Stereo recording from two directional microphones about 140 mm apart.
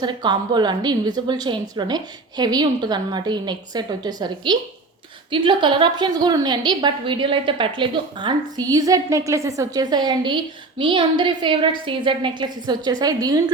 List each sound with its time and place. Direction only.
0.0 s a woman's voice: 30° right (ahead or behind)